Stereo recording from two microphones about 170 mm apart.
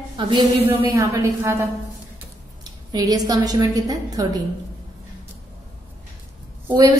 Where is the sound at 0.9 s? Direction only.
15° right (ahead or behind).